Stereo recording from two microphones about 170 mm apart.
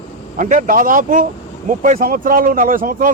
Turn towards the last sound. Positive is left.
turn(degrees=-55)  # may be behind; listen again after turning